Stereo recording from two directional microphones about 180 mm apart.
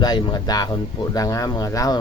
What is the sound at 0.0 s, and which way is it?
Speech, 20° left (ahead or behind).